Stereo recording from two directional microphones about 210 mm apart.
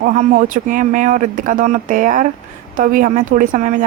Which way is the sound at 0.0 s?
40° right (ahead or behind).